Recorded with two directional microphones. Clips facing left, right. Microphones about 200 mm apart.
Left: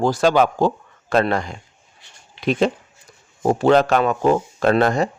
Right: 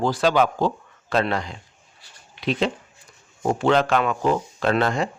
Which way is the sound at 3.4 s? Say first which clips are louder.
Left 4 dB; 40° left (ahead or behind).